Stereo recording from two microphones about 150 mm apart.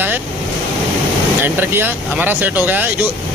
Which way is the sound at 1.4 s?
15° right (ahead or behind).